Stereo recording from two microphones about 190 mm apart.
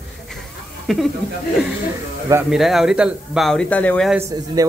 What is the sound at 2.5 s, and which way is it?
Speech, centre (ahead or behind).